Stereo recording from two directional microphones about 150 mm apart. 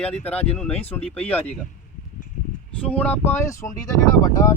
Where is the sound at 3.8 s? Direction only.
25° left (ahead or behind).